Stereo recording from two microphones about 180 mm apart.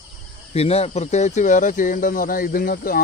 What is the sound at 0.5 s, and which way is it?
Speech, 35° left (ahead or behind).